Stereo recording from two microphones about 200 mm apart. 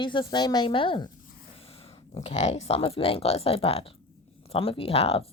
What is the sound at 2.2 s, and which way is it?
Speech, 35° left (ahead or behind).